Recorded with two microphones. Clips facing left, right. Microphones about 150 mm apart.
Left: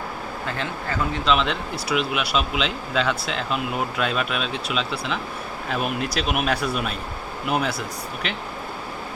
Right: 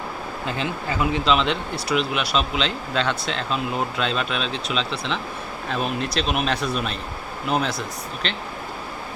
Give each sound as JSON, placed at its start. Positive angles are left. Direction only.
{"t": 0.4, "sound": "speech", "side_deg": -20}
{"t": 1.2, "sound": "speech", "side_deg": 0}